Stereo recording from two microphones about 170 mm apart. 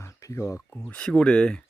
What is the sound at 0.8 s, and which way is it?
Speech, 5° left (ahead or behind).